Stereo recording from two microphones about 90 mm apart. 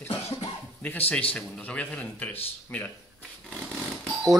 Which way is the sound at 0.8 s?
20° left (ahead or behind).